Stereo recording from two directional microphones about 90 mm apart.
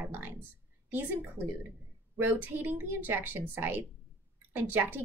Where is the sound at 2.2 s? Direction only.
25° right (ahead or behind).